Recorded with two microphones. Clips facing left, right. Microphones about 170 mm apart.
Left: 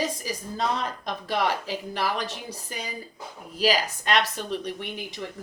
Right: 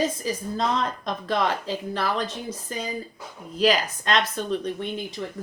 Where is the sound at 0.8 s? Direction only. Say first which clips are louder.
Right 3 dB; 10° left (ahead or behind).